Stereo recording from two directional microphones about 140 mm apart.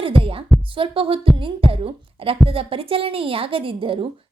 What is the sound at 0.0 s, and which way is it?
Heart murmur, 40° right (ahead or behind).